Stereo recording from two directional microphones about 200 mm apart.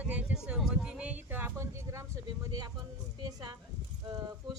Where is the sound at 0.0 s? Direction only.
5° right (ahead or behind).